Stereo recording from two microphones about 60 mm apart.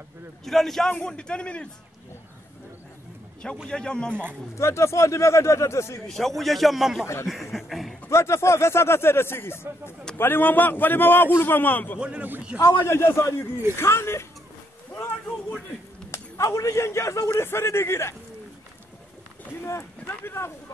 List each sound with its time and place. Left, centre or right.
0.5 s a man's voice: centre
1.0 s a man's voice: centre
3.6 s a man's voice: centre
4.6 s speech: left
6.0 s a man's voice: centre
8.1 s a man's voice: left
12.5 s speech: left
16.1 s speech: left
17.3 s speech: left
19.6 s speech: left